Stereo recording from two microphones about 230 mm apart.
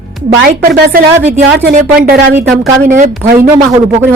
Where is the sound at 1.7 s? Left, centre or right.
Right.